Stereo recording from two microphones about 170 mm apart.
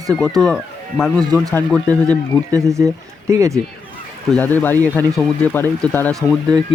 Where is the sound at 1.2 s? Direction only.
25° right (ahead or behind).